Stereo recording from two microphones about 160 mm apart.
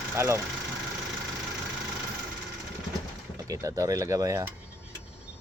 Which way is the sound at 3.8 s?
20° right (ahead or behind).